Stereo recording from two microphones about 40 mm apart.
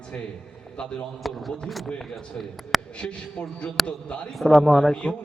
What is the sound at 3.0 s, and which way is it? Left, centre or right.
Speech, left.